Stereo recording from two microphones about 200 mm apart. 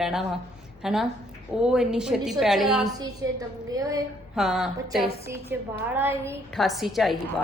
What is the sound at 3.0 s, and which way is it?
A woman's voice, 20° right (ahead or behind).